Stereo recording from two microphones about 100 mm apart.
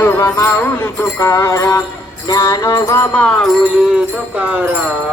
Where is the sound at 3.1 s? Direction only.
10° left (ahead or behind).